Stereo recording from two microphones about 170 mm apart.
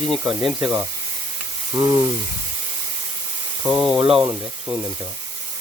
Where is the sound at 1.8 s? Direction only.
20° right (ahead or behind).